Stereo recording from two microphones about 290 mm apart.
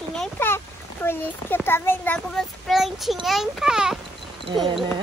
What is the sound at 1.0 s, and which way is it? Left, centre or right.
A child's voice, centre.